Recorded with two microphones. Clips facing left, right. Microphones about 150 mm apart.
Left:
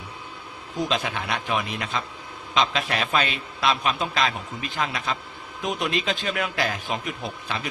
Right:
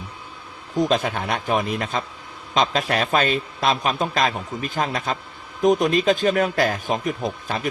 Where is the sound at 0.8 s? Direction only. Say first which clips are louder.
Right 6 dB; 45° right (ahead or behind).